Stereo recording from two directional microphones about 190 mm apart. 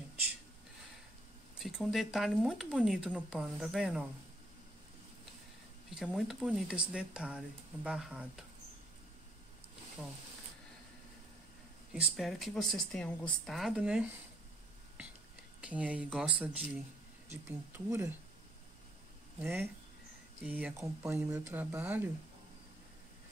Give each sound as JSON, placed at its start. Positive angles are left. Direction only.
{"t": 1.6, "sound": "speech", "side_deg": 0}
{"t": 5.9, "sound": "speech", "side_deg": -5}
{"t": 11.9, "sound": "speech", "side_deg": 0}
{"t": 15.6, "sound": "speech", "side_deg": -5}
{"t": 19.4, "sound": "speech", "side_deg": -10}